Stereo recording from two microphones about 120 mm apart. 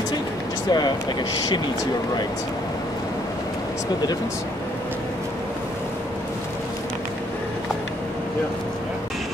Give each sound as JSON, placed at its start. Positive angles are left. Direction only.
{"t": 0.7, "sound": "speech", "side_deg": 35}